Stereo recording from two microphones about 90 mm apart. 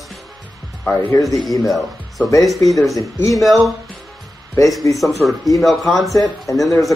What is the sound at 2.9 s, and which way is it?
Speech, 35° left (ahead or behind).